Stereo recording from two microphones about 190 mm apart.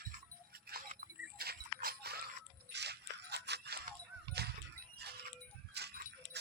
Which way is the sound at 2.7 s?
60° right (ahead or behind).